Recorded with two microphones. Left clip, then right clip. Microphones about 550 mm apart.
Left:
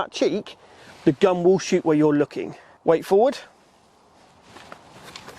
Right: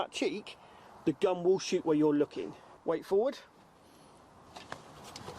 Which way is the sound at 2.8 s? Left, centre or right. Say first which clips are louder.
Left 12 dB; left.